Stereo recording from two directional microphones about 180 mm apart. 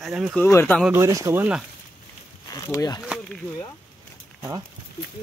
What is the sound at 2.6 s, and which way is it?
Speech, 20° left (ahead or behind).